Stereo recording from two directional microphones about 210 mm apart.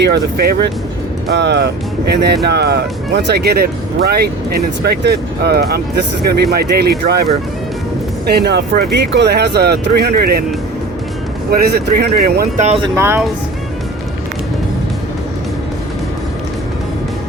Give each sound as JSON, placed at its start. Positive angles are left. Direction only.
{"t": 0.0, "sound": "speech", "side_deg": -50}
{"t": 8.3, "sound": "speech", "side_deg": -50}
{"t": 11.5, "sound": "speech", "side_deg": -45}
{"t": 12.6, "sound": "speech", "side_deg": -25}
{"t": 13.0, "sound": "speech", "side_deg": -10}